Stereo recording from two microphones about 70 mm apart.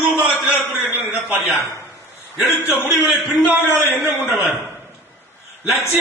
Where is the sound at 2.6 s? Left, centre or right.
Centre.